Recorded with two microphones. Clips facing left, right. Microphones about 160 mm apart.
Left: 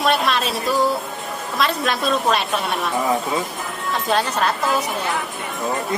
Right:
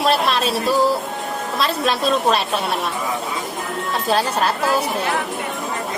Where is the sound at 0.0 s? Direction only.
30° right (ahead or behind).